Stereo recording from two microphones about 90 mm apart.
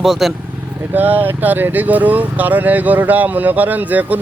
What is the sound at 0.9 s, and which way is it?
A man's voice, 20° right (ahead or behind).